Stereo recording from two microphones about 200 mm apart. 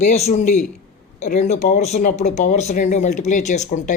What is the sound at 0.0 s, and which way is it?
Speech, 35° left (ahead or behind).